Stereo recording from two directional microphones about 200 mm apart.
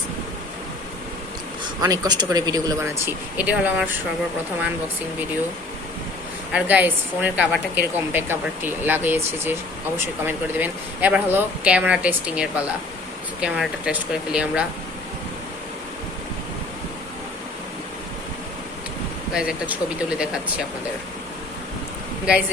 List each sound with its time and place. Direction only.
1.8 s speech: 20° right (ahead or behind)
3.3 s a woman's voice: 5° right (ahead or behind)
6.5 s a woman's voice: 5° right (ahead or behind)
19.3 s speech: 5° right (ahead or behind)